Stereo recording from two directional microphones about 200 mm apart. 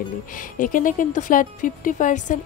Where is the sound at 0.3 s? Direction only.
40° left (ahead or behind).